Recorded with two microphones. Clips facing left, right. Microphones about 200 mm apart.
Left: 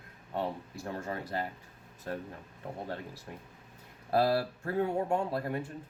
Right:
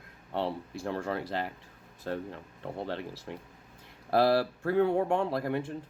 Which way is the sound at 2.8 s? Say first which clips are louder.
Right 4 dB; 90° right.